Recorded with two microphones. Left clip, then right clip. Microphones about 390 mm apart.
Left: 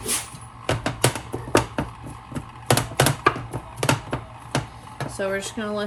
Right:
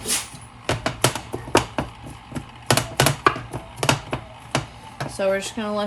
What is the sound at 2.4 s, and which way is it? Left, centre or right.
Computer keyboard, centre.